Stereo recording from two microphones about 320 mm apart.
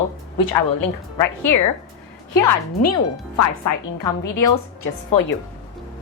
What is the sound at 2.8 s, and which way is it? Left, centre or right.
Speech, left.